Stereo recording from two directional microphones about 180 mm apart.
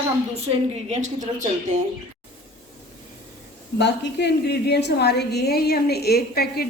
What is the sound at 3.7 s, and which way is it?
A woman's voice, 70° left (ahead or behind).